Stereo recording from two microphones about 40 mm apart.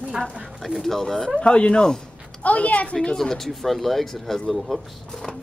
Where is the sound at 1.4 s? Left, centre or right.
Left.